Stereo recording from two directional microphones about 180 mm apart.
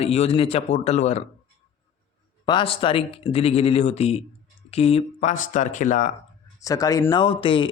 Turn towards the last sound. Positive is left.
turn(degrees=30)  # may be behind; listen again after turning